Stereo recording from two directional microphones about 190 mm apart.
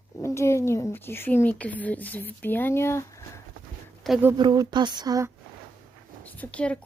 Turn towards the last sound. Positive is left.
turn(degrees=5)  # may be behind; listen again after turning